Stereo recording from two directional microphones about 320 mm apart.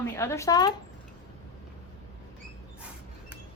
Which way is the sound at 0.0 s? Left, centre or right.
Centre.